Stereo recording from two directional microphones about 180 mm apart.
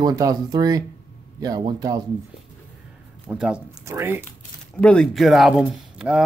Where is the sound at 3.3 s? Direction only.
5° right (ahead or behind).